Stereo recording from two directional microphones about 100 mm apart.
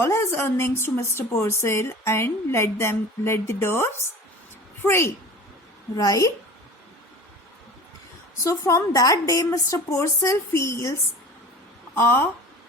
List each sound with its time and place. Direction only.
0.0 s a woman's voice: 25° left (ahead or behind)
6.0 s a woman's voice: 35° left (ahead or behind)
8.4 s a woman's voice: 35° left (ahead or behind)
11.9 s a woman's voice: 20° left (ahead or behind)